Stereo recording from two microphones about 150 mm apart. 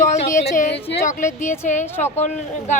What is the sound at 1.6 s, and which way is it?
Speech, 55° left (ahead or behind).